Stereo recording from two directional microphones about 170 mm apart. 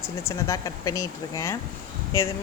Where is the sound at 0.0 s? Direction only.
15° left (ahead or behind).